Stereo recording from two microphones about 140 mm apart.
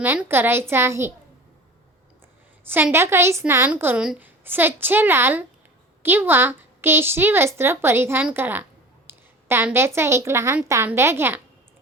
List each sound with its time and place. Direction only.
0.0 s a woman's voice: 15° right (ahead or behind)
2.6 s a woman's voice: 15° right (ahead or behind)